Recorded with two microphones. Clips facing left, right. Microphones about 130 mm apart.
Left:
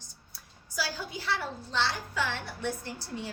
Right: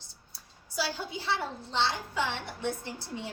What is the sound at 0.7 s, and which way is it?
A woman's voice, 25° right (ahead or behind).